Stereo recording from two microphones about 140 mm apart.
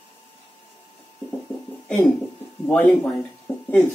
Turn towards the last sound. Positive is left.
turn(degrees=15)  # may be behind; listen again after turning